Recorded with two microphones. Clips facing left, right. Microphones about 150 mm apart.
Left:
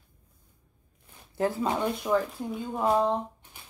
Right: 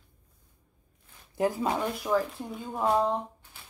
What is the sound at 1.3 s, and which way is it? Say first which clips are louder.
Speech: even; 15° right (ahead or behind).